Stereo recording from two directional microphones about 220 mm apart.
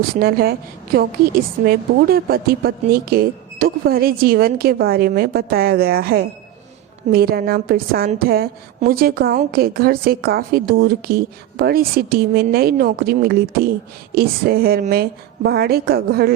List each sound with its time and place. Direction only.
0.2 s a woman's voice: 45° right (ahead or behind)
1.6 s a woman's voice: 45° right (ahead or behind)